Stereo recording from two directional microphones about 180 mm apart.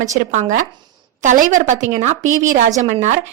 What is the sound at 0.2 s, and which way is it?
A woman's voice, 45° right (ahead or behind).